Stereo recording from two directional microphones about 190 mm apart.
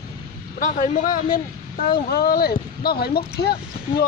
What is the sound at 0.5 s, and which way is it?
A man's voice, 40° left (ahead or behind).